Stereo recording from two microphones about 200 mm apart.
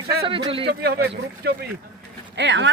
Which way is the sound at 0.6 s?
55° right (ahead or behind).